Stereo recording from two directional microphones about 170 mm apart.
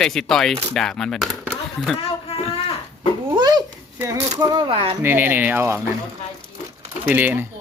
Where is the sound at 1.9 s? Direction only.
35° left (ahead or behind).